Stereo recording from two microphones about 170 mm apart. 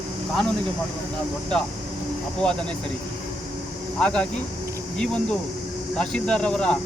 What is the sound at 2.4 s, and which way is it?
Speech, 5° left (ahead or behind).